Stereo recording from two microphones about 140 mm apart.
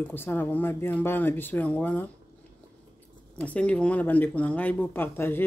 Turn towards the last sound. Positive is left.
turn(degrees=15)  # may be behind; listen again after turning